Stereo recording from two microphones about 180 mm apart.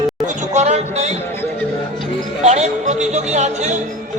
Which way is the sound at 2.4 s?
40° right (ahead or behind).